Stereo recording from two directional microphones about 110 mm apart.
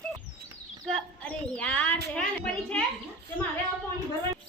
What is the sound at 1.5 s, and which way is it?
A child's voice, 10° left (ahead or behind).